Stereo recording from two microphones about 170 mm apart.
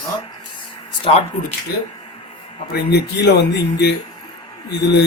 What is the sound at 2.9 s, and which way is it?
Speech, 75° left (ahead or behind).